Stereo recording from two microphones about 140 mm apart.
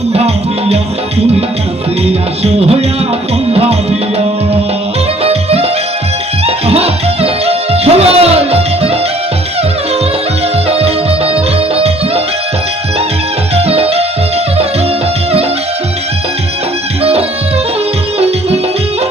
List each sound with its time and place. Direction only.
2.0 s music: 45° right (ahead or behind)
5.2 s music: 45° right (ahead or behind)
10.7 s music: 45° right (ahead or behind)
13.6 s music: 45° right (ahead or behind)
17.0 s music: 45° right (ahead or behind)